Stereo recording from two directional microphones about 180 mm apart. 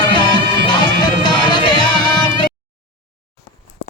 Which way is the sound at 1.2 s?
25° left (ahead or behind).